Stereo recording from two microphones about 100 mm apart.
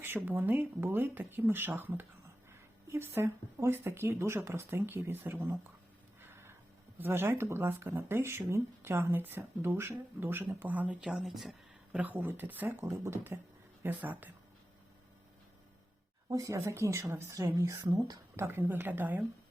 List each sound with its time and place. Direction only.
0.3 s speech: 20° right (ahead or behind)
7.0 s speech: 20° right (ahead or behind)
11.1 s speech: centre (ahead or behind)
11.9 s speech: 15° right (ahead or behind)
16.3 s speech: 35° right (ahead or behind)
18.3 s speech: 20° right (ahead or behind)